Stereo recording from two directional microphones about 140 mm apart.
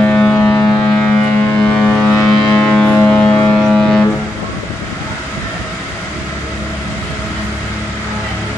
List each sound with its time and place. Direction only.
0.0 s civil defense siren: 10° left (ahead or behind)
1.6 s vehicle: 10° left (ahead or behind)